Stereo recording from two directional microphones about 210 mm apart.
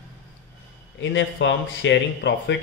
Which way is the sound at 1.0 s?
60° left (ahead or behind).